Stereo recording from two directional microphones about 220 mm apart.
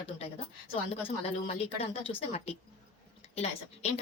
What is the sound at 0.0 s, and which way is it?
A woman's voice, 25° left (ahead or behind).